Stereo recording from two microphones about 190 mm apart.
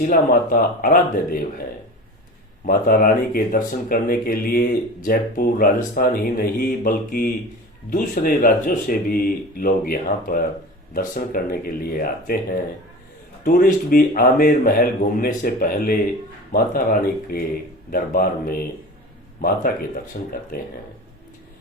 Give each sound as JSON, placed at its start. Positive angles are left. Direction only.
{"t": 0.0, "sound": "speech", "side_deg": 50}
{"t": 2.6, "sound": "speech", "side_deg": 50}
{"t": 13.4, "sound": "speech", "side_deg": 45}